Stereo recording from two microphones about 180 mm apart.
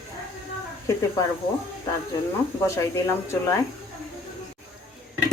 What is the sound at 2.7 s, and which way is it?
Speech, 15° left (ahead or behind).